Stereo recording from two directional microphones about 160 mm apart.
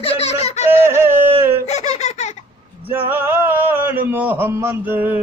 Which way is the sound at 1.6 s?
45° left (ahead or behind).